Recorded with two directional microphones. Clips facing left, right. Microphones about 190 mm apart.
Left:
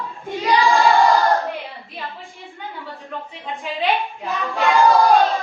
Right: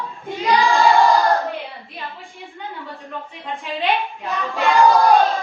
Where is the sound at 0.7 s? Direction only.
Centre (ahead or behind).